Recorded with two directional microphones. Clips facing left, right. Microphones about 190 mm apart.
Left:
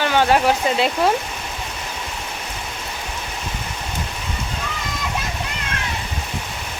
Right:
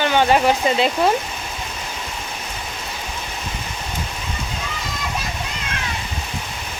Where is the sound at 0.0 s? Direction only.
Centre (ahead or behind).